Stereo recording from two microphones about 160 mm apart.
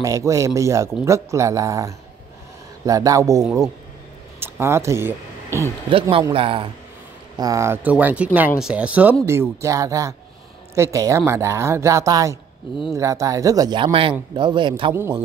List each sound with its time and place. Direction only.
0.0 s speech: 20° right (ahead or behind)
5.9 s speech: 35° right (ahead or behind)
7.3 s speech: 20° right (ahead or behind)